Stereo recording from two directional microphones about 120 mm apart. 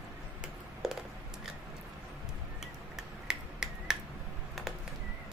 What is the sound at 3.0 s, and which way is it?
Finger snapping, 5° right (ahead or behind).